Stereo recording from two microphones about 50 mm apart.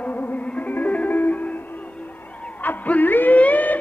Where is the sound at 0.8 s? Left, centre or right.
Left.